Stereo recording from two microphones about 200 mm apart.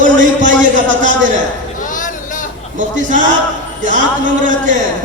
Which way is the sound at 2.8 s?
40° right (ahead or behind).